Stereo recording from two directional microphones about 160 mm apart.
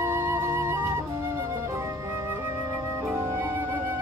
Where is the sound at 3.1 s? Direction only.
15° right (ahead or behind).